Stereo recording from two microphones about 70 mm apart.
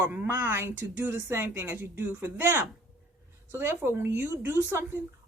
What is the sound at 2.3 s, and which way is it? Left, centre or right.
Speech, right.